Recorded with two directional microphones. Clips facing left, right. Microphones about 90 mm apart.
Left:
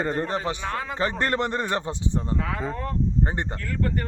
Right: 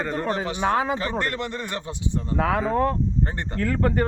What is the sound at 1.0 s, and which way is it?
Speech, 35° left (ahead or behind).